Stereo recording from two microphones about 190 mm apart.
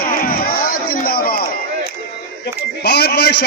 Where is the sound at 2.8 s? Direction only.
60° left (ahead or behind).